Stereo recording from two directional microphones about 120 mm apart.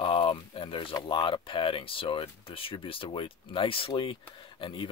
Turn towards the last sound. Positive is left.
turn(degrees=45)  # may be behind; listen again after turning